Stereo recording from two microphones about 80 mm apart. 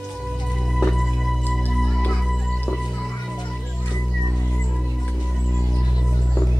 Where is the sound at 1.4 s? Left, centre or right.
Left.